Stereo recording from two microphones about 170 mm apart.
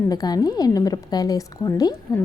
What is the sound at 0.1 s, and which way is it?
A woman's voice, 20° left (ahead or behind).